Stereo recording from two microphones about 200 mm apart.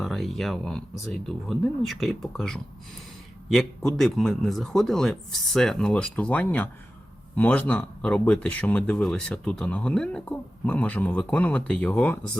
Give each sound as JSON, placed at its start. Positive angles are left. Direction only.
{"t": 0.0, "sound": "speech", "side_deg": 0}